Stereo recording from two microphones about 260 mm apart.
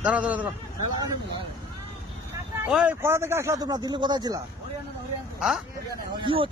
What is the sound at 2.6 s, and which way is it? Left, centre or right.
Speech, centre.